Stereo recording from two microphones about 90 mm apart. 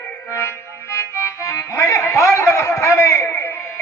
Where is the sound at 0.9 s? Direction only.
35° left (ahead or behind).